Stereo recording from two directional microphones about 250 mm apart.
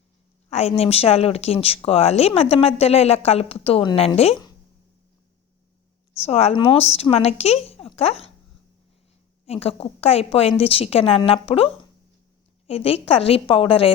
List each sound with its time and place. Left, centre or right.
0.5 s a woman's voice: left
6.1 s a woman's voice: left
9.5 s a woman's voice: left